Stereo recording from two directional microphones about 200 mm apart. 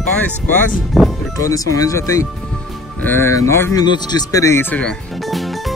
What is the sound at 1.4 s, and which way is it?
Speech, 15° left (ahead or behind).